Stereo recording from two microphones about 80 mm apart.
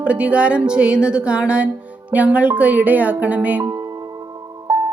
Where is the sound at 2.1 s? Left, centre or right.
Centre.